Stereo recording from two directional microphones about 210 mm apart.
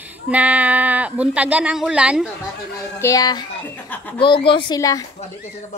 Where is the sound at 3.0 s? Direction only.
15° left (ahead or behind).